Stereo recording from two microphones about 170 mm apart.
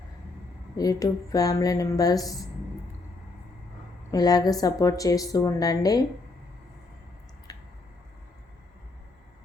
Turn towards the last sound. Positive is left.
turn(degrees=20)  # may be behind; listen again after turning